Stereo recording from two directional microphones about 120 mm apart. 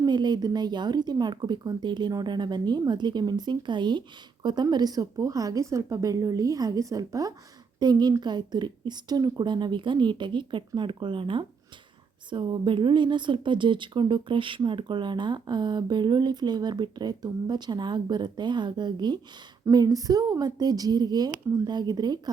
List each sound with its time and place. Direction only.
0.0 s a woman's voice: 35° right (ahead or behind)